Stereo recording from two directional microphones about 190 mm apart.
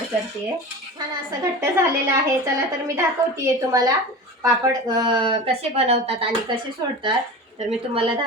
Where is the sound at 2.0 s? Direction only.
15° right (ahead or behind); by 6.2 s 30° right (ahead or behind).